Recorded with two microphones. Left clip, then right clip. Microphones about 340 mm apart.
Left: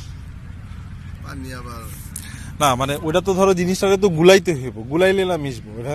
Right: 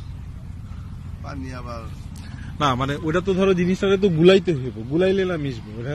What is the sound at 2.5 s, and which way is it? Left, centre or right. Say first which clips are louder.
A man's voice: left 4 dB; centre.